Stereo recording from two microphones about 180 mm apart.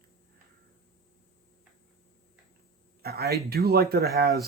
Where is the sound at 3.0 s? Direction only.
60° right (ahead or behind).